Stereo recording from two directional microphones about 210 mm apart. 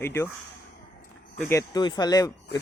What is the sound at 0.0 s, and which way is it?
Speech, 10° left (ahead or behind).